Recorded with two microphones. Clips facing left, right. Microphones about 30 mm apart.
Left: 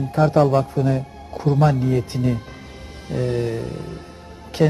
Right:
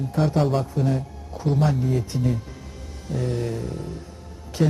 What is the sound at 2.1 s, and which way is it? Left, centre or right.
Speech, left.